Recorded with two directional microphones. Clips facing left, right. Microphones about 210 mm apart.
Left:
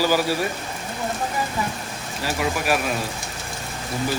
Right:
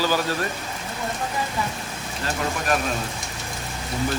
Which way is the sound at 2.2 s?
10° left (ahead or behind).